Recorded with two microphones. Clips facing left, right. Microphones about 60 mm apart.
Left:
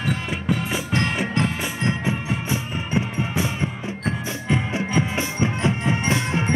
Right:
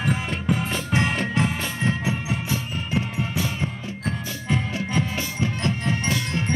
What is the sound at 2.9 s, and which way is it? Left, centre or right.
Music, centre.